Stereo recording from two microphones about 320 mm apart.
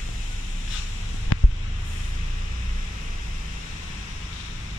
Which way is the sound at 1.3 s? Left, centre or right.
Left.